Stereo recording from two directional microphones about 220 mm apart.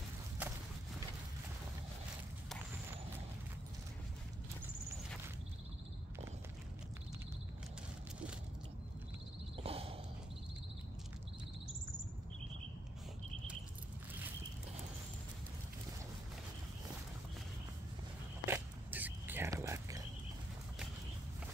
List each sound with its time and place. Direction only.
0.4 s walk: 5° right (ahead or behind)
9.6 s a sound: 25° right (ahead or behind)
18.4 s whispering: 10° right (ahead or behind)